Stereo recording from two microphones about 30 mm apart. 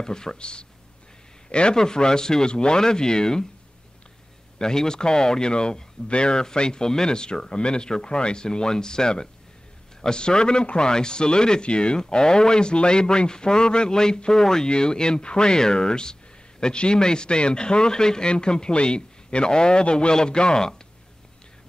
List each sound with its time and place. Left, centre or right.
0.0 s speech: left
0.4 s speech: left
1.8 s speech: left
2.5 s speech: left
4.6 s speech: left